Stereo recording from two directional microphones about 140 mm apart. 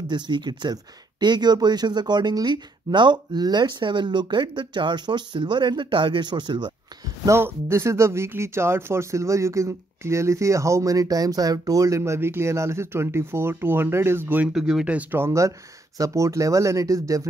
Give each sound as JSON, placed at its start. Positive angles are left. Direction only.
{"t": 0.1, "sound": "speech", "side_deg": -30}
{"t": 7.2, "sound": "speech", "side_deg": -15}
{"t": 14.5, "sound": "speech", "side_deg": -5}